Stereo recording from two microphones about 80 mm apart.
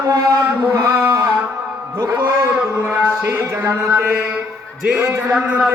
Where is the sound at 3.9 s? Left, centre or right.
Right.